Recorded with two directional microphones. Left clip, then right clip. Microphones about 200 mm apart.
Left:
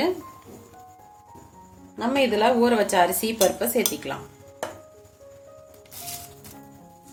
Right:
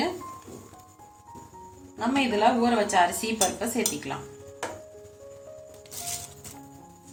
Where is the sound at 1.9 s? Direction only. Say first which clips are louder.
Left 4 dB; 60° left (ahead or behind).